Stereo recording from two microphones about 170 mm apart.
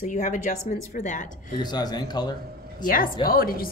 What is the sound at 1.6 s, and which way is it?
Speech, 25° left (ahead or behind).